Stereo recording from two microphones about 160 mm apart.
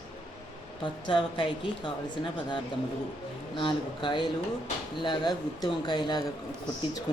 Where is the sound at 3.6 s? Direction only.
30° left (ahead or behind).